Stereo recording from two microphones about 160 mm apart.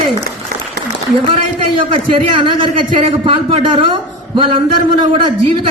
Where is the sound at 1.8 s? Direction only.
35° right (ahead or behind).